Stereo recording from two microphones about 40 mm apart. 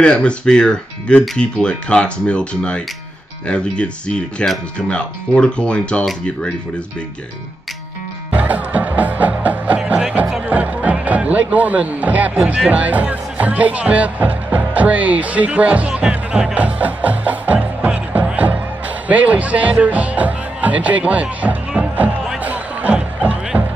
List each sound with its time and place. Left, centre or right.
0.0 s speech: left
8.3 s music: right
12.4 s speech: right
16.5 s speech: right
18.3 s music: right
19.0 s speech: right
22.4 s music: right
22.9 s music: right